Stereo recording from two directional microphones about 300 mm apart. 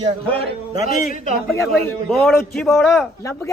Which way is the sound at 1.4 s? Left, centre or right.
Centre.